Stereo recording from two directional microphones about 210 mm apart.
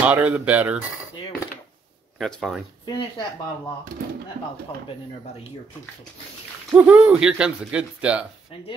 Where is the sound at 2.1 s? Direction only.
Centre (ahead or behind).